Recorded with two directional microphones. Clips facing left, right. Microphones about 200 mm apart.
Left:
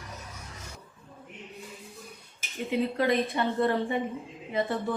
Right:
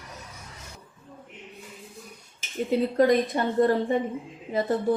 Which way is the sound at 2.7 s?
40° right (ahead or behind).